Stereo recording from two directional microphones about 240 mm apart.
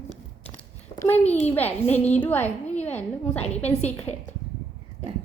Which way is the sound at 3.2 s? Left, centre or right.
Left.